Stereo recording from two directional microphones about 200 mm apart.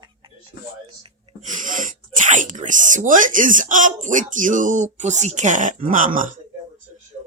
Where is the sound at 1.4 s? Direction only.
40° right (ahead or behind).